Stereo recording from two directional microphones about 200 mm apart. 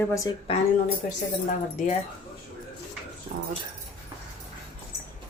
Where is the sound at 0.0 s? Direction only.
15° left (ahead or behind).